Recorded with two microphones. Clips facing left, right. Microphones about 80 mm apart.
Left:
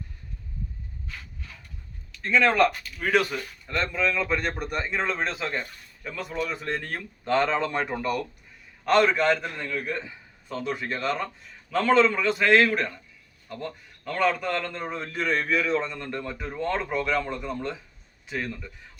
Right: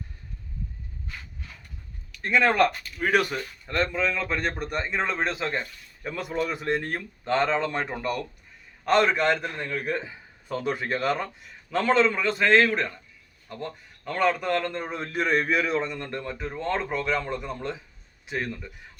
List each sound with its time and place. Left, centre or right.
2.2 s speech: centre
6.0 s a man's voice: centre
7.3 s speech: centre
9.6 s speech: right
11.7 s speech: centre
13.5 s speech: right
14.0 s a man's voice: centre
16.4 s a man's voice: centre